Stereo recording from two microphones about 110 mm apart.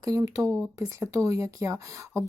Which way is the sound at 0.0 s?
30° right (ahead or behind).